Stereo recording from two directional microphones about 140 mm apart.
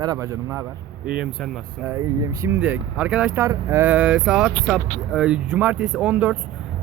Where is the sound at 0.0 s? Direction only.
25° right (ahead or behind).